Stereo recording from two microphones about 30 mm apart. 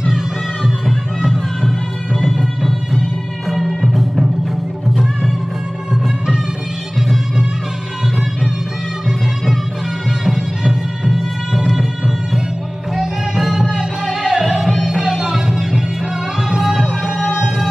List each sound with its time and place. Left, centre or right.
0.8 s music: centre
2.2 s music: centre
10.0 s music: centre
12.9 s music: centre
14.4 s music: centre